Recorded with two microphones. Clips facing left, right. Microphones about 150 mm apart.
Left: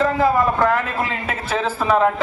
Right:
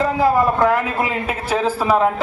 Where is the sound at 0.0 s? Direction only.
5° right (ahead or behind).